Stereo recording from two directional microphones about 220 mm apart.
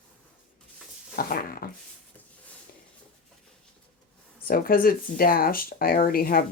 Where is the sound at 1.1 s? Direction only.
40° left (ahead or behind).